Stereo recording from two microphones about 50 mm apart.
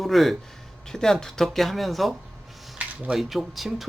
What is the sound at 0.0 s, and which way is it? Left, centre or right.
Speech, centre.